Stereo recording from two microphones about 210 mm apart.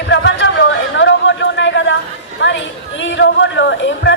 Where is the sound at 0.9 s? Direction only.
60° left (ahead or behind).